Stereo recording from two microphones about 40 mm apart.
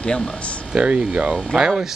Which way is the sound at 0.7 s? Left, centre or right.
Right.